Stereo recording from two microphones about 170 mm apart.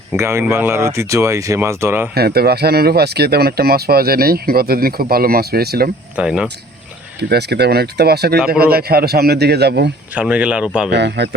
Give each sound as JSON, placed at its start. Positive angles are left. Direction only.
{"t": 0.1, "sound": "speech", "side_deg": -15}
{"t": 2.1, "sound": "speech", "side_deg": -65}
{"t": 6.1, "sound": "speech", "side_deg": -5}
{"t": 7.2, "sound": "a man's voice", "side_deg": -75}
{"t": 10.2, "sound": "speech", "side_deg": -5}
{"t": 10.9, "sound": "speech", "side_deg": -90}